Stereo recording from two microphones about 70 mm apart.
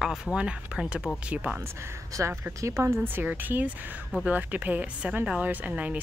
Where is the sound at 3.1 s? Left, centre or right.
Right.